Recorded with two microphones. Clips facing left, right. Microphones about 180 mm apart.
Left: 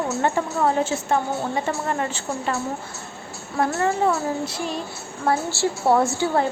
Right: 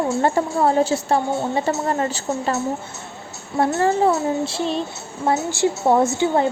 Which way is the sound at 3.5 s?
25° right (ahead or behind).